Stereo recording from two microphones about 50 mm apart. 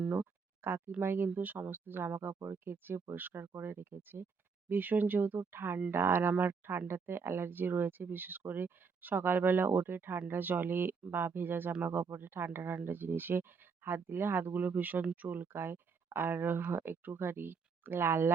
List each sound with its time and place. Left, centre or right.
0.1 s a sound: right
1.0 s speech: right
2.1 s speech: right
6.3 s speech: right
6.7 s speech: right
15.5 s speech: right